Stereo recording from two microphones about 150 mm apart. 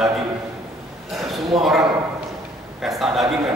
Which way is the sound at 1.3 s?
Centre (ahead or behind).